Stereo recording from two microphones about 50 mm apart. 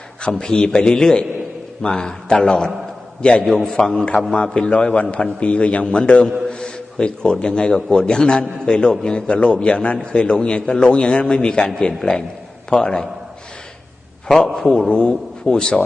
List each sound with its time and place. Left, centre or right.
0.2 s a man's voice: centre
14.4 s a man's voice: centre